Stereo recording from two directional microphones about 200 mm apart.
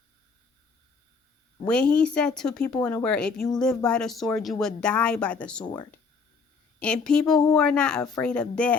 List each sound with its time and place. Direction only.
1.6 s speech: 5° left (ahead or behind)
5.6 s speech: 20° left (ahead or behind)
6.7 s speech: 5° left (ahead or behind)